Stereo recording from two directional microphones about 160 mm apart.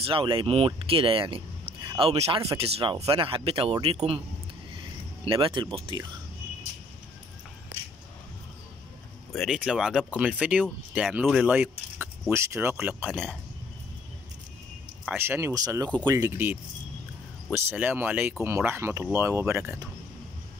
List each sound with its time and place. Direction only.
0.0 s speech: 35° right (ahead or behind)
5.2 s speech: 30° right (ahead or behind)
9.3 s speech: centre (ahead or behind)
15.0 s speech: 15° right (ahead or behind)